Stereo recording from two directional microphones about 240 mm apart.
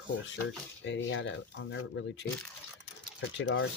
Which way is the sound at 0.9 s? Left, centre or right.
Left.